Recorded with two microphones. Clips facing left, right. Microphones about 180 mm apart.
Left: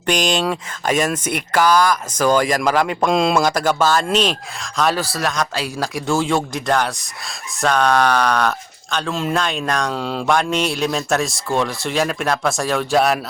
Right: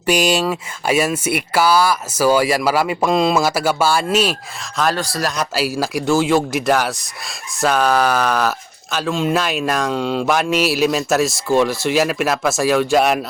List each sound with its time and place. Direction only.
0.0 s speech: 5° right (ahead or behind)